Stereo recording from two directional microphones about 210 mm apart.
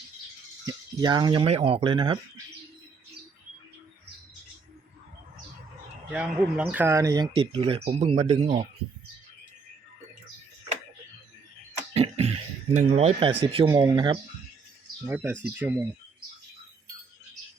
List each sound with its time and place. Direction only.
0.6 s speech: 15° right (ahead or behind)
6.1 s speech: 5° right (ahead or behind); by 8.6 s 25° right (ahead or behind)
11.9 s a sound: 25° right (ahead or behind)
12.7 s speech: 30° right (ahead or behind)
15.0 s speech: 10° right (ahead or behind)